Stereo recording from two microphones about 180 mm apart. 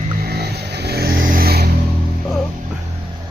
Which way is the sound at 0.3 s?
65° right (ahead or behind).